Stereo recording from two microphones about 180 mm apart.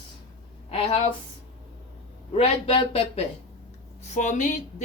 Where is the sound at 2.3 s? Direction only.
30° left (ahead or behind).